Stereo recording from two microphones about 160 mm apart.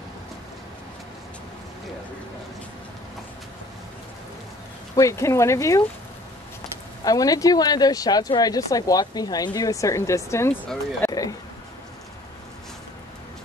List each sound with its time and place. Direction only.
4.9 s speech: 20° left (ahead or behind)
7.1 s speech: 20° left (ahead or behind)